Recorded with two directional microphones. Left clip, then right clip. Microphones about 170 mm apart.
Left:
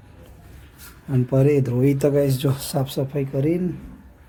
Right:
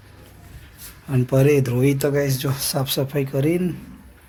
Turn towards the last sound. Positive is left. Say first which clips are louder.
# right 1 dB
turn(degrees=0)  # may be behind; listen again after turning